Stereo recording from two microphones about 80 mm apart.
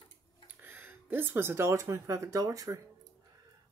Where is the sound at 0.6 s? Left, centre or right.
Right.